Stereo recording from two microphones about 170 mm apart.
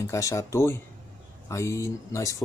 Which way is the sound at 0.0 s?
15° left (ahead or behind).